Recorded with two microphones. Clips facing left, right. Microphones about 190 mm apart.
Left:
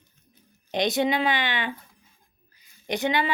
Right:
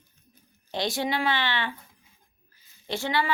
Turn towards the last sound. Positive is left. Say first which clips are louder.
# left 3 dB
turn(degrees=20)  # may be behind; listen again after turning